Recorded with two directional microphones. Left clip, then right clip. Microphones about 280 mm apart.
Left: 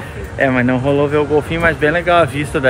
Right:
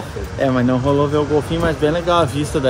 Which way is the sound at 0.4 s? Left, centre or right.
Centre.